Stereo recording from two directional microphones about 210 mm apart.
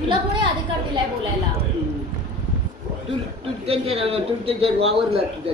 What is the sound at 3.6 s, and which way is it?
A man's voice, 30° right (ahead or behind).